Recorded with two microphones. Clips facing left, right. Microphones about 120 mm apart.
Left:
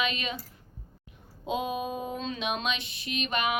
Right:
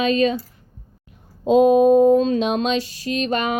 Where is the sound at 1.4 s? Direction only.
40° right (ahead or behind).